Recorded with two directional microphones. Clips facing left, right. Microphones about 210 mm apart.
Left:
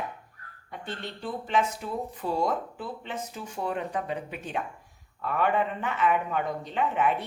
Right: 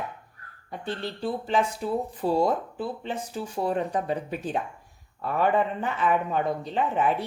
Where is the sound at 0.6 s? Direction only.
35° right (ahead or behind).